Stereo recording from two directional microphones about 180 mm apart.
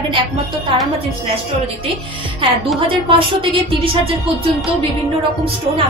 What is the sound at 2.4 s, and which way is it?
A woman's voice, 30° right (ahead or behind).